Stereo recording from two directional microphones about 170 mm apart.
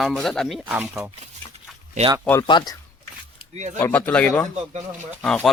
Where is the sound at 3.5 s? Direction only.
45° right (ahead or behind).